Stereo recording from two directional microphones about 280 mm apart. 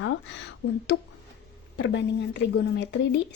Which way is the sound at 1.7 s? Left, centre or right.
Left.